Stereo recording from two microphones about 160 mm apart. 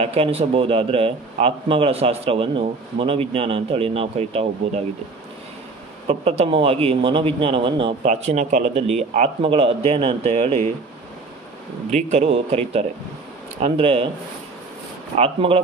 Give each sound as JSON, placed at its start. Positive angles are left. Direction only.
{"t": 0.0, "sound": "speech", "side_deg": -40}
{"t": 6.0, "sound": "speech", "side_deg": -40}
{"t": 8.0, "sound": "a man's voice", "side_deg": -45}
{"t": 11.9, "sound": "a man's voice", "side_deg": -45}
{"t": 15.1, "sound": "speech", "side_deg": -35}